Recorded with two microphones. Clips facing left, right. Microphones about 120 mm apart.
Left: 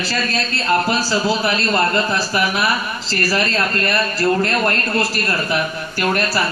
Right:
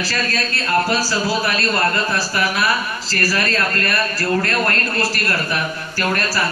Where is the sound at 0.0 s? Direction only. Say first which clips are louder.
Left 1 dB; 20° left (ahead or behind).